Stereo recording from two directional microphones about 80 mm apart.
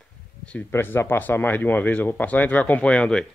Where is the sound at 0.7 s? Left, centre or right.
Left.